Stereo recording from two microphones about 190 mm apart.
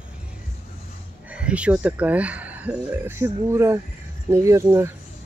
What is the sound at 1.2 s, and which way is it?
Speech, 5° right (ahead or behind).